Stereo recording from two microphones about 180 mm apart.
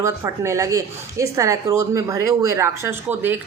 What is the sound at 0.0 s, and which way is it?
Speech, 15° right (ahead or behind).